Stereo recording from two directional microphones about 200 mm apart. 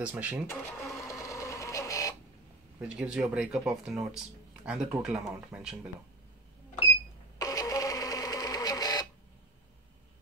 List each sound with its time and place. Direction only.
0.0 s speech: 5° right (ahead or behind)
0.5 s speech: 15° left (ahead or behind)
1.2 s printer: 15° left (ahead or behind)
2.8 s speech: 5° right (ahead or behind)
7.3 s printer: 15° left (ahead or behind)